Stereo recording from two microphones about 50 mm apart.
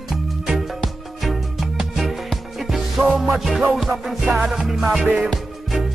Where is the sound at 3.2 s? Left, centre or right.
Centre.